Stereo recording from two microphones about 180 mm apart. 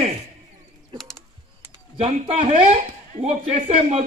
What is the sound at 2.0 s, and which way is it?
A man's voice, 35° right (ahead or behind).